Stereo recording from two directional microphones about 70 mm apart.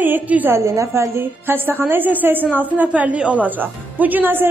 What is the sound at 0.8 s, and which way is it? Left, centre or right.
A woman's voice, right.